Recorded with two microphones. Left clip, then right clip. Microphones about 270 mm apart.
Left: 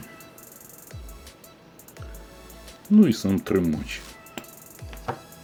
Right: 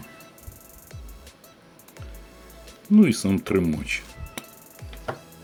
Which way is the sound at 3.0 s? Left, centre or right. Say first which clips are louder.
Even; centre.